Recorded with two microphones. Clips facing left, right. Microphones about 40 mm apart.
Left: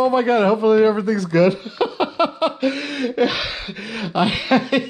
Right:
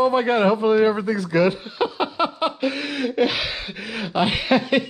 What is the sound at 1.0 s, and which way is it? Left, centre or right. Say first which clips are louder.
Speech: left 3 dB; centre.